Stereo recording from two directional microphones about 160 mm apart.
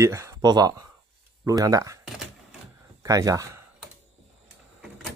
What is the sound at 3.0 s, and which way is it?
Speech, 20° right (ahead or behind).